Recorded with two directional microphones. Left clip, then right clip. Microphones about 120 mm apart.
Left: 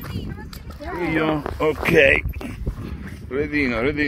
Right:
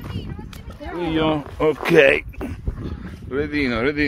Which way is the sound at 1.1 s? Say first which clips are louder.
Right 1 dB; 65° right (ahead or behind).